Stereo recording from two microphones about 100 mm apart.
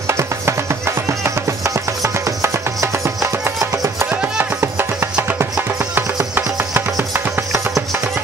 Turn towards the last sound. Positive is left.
turn(degrees=-25)  # may be behind; listen again after turning